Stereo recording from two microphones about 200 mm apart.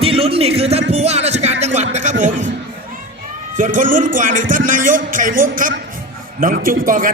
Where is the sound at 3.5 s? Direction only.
40° right (ahead or behind).